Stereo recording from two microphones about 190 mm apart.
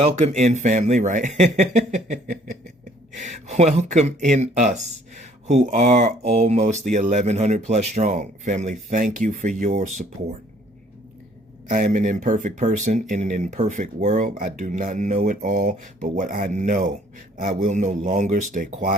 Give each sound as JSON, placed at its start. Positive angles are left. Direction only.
{"t": 0.0, "sound": "speech", "side_deg": -40}
{"t": 11.7, "sound": "speech", "side_deg": -40}